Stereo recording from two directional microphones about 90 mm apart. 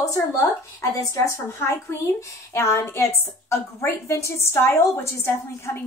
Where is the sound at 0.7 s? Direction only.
35° left (ahead or behind).